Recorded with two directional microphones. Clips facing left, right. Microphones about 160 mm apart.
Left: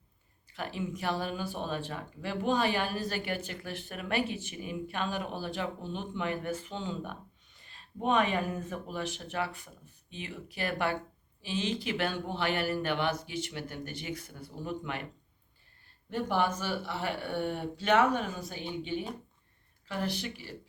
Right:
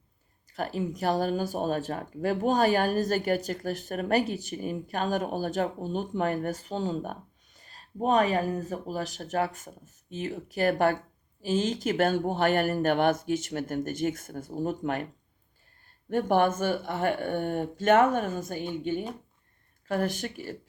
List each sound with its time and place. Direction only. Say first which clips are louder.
0.5 s speech: right 5 dB; 40° right (ahead or behind)
16.0 s speech: right 6 dB; 50° right (ahead or behind)